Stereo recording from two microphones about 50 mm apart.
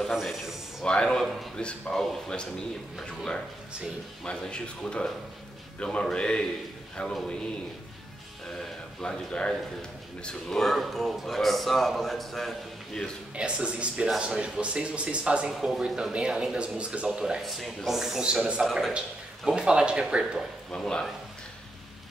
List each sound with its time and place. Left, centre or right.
0.1 s a man's voice: centre
0.8 s speech: centre
1.2 s a man's voice: centre
1.6 s speech: centre
8.5 s a man's voice: centre
13.4 s speech: right
15.6 s a man's voice: centre
16.0 s speech: centre
17.4 s a man's voice: centre
18.2 s speech: right
18.6 s a man's voice: centre
18.9 s speech: centre
20.7 s speech: centre